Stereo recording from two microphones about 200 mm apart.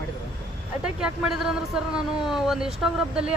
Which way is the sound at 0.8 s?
5° right (ahead or behind).